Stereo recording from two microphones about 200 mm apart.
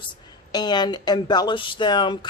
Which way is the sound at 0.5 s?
20° left (ahead or behind).